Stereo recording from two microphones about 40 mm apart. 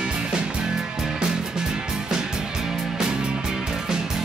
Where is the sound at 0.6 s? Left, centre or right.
Centre.